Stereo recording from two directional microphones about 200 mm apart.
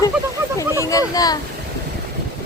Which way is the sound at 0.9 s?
15° left (ahead or behind).